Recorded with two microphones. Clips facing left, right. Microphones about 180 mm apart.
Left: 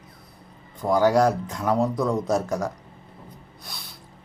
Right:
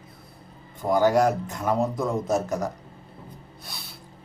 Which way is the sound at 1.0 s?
20° right (ahead or behind).